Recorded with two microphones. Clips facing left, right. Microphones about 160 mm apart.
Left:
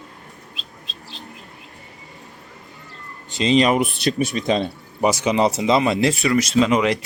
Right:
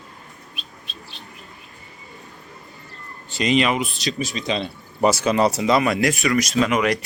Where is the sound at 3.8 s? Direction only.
55° left (ahead or behind).